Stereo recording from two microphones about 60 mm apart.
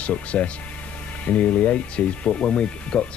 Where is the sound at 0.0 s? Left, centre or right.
Left.